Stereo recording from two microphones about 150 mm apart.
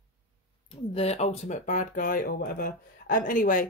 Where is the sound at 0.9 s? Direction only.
45° left (ahead or behind).